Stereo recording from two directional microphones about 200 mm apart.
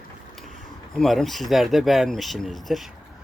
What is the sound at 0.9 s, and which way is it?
Speech, centre (ahead or behind).